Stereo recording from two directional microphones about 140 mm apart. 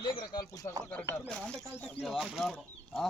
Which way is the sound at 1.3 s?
5° left (ahead or behind).